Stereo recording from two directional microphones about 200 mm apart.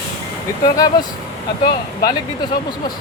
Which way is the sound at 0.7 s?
20° left (ahead or behind).